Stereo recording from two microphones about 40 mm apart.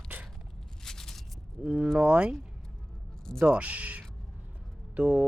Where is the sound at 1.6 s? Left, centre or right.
Right.